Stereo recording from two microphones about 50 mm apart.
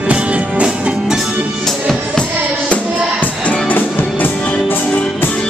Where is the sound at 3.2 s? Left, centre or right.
Left.